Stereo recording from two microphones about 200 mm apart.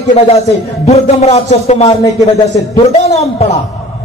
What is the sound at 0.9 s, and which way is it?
A man's voice, 35° left (ahead or behind).